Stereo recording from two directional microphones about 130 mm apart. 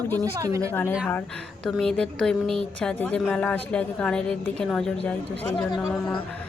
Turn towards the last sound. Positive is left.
turn(degrees=0)  # may be behind; listen again after turning